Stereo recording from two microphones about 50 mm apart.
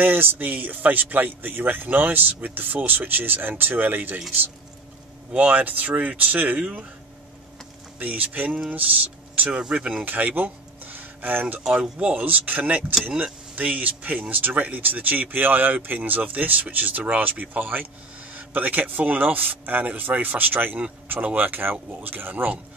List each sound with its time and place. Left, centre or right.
0.0 s speech: right
5.3 s speech: right
6.6 s speech: centre
8.0 s speech: right
9.6 s speech: right
10.0 s speech: right
11.7 s speech: right